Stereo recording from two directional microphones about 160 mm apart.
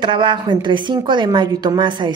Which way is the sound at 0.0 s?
30° right (ahead or behind).